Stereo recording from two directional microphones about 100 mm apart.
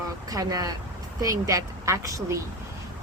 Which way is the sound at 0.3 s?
35° right (ahead or behind).